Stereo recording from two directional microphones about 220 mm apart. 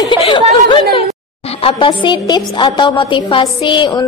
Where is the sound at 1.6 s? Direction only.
25° left (ahead or behind).